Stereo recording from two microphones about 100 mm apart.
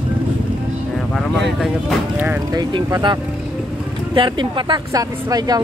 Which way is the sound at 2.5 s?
45° right (ahead or behind).